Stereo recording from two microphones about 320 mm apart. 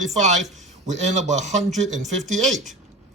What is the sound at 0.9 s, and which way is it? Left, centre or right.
Speech, right.